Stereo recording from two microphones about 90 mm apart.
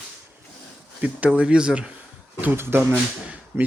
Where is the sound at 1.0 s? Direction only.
15° right (ahead or behind).